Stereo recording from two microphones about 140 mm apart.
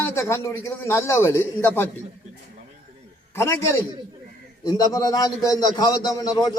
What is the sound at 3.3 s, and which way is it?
A man's voice, 20° left (ahead or behind).